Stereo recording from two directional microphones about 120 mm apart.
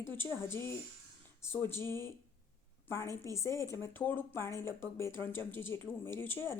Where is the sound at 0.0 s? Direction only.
20° left (ahead or behind).